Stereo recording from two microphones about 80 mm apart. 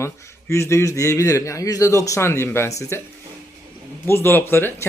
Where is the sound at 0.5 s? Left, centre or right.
Left.